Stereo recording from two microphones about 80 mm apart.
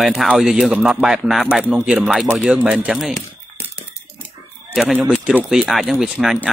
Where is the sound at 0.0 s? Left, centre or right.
Centre.